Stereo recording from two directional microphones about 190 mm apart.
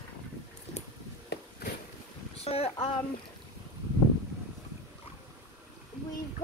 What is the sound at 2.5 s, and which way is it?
Speech, 30° left (ahead or behind).